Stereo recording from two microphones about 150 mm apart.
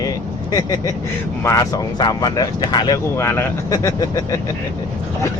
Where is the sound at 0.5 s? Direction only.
25° left (ahead or behind).